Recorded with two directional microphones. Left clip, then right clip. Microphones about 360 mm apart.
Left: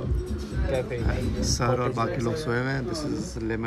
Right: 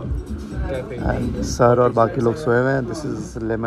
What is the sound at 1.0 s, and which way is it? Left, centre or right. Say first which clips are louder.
A man's voice: right 5 dB; centre.